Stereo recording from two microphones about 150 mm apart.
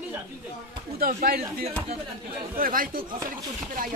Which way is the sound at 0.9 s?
85° right.